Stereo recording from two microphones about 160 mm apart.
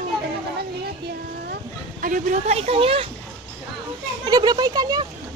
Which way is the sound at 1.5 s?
60° right (ahead or behind).